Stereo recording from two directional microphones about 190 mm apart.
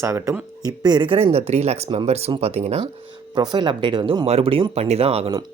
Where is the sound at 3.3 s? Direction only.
20° right (ahead or behind).